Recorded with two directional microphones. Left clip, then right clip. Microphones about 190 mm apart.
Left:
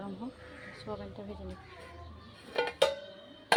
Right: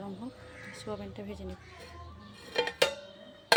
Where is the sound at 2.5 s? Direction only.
35° right (ahead or behind).